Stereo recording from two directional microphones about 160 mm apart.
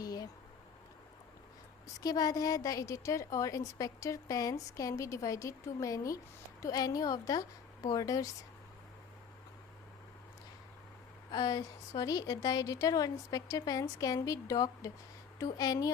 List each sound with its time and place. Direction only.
0.0 s a sound: 25° left (ahead or behind)
2.0 s a woman's voice: 25° left (ahead or behind)
11.3 s a woman's voice: 25° left (ahead or behind)